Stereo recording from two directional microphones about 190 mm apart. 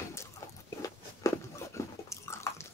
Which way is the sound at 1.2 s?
15° left (ahead or behind).